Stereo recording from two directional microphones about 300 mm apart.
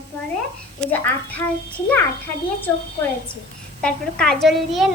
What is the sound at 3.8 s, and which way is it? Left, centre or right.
A woman's voice, centre.